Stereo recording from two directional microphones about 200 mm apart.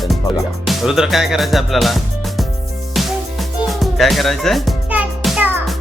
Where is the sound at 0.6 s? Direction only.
Centre (ahead or behind).